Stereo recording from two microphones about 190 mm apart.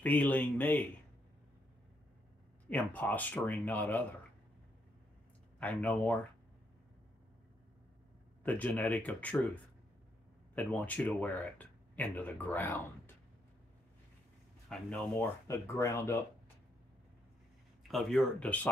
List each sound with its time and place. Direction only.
0.0 s speech: 10° left (ahead or behind)
2.7 s speech: 10° left (ahead or behind)
5.6 s speech: 5° left (ahead or behind)
8.5 s speech: 10° left (ahead or behind)
10.5 s speech: 5° left (ahead or behind)
14.7 s speech: 5° left (ahead or behind)
17.8 s speech: centre (ahead or behind)